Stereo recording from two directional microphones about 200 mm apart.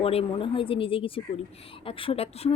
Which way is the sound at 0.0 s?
30° left (ahead or behind).